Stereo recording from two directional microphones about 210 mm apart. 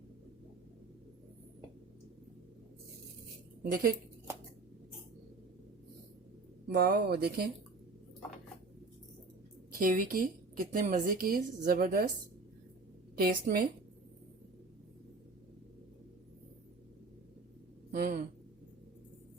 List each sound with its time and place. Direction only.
3.6 s a woman's voice: 45° right (ahead or behind)
6.7 s a woman's voice: 45° right (ahead or behind)
9.8 s a woman's voice: 40° right (ahead or behind)
13.1 s a woman's voice: 45° right (ahead or behind)
17.9 s a sound: 45° right (ahead or behind)